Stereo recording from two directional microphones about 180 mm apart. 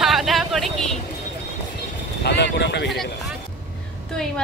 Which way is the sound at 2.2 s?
75° left (ahead or behind).